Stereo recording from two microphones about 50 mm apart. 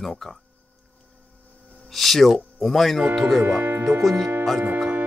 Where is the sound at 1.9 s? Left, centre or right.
Centre.